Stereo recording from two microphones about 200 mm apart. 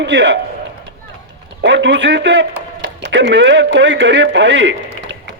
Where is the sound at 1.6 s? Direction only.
65° right (ahead or behind).